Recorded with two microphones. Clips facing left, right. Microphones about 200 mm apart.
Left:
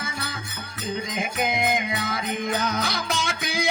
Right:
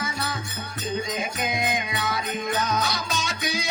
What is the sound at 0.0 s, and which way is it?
Music, 55° left (ahead or behind).